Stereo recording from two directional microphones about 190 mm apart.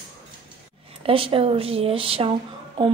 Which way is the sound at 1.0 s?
30° right (ahead or behind).